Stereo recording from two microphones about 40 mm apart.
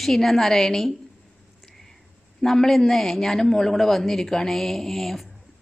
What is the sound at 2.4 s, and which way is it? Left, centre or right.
A woman's voice, centre.